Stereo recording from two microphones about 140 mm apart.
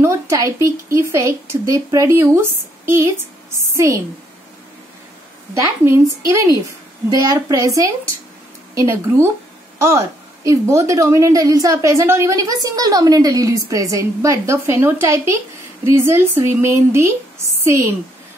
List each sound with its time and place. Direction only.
0.0 s a woman's voice: 20° right (ahead or behind)
5.5 s a woman's voice: 20° right (ahead or behind)